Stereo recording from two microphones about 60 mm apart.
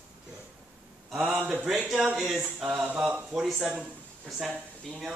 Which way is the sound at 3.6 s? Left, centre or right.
Centre.